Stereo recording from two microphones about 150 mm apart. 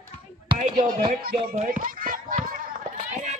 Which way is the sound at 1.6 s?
65° right (ahead or behind).